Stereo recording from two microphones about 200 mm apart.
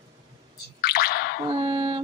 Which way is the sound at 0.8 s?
50° left (ahead or behind).